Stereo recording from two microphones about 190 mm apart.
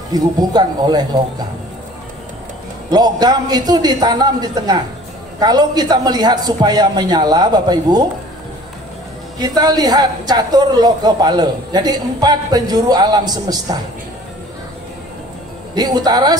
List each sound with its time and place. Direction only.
0.1 s a woman's voice: 20° right (ahead or behind)
2.9 s a woman's voice: 20° right (ahead or behind)
9.6 s a woman's voice: 20° right (ahead or behind)
15.7 s a woman's voice: 20° right (ahead or behind)